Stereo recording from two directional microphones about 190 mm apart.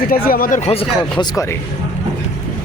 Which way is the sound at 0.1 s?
50° left (ahead or behind).